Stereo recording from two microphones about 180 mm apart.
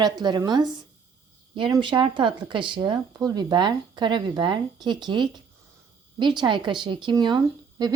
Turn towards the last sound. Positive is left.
turn(degrees=-20)  # may be behind; listen again after turning